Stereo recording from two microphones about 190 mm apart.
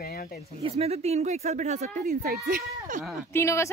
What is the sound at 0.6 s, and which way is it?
Speech, 30° right (ahead or behind).